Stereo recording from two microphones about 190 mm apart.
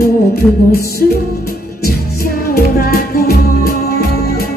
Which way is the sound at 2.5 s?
55° left (ahead or behind).